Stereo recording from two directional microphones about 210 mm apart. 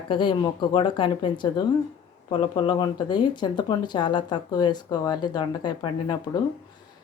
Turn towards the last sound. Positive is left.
turn(degrees=20)  # may be behind; listen again after turning